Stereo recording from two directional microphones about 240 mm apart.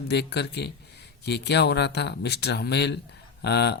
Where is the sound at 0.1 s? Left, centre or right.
Left.